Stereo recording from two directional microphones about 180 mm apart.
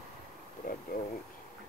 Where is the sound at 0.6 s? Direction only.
55° left (ahead or behind).